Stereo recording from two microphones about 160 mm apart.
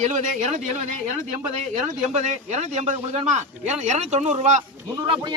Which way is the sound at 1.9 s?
50° right (ahead or behind).